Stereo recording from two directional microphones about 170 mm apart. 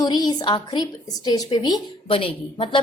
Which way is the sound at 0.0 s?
25° left (ahead or behind).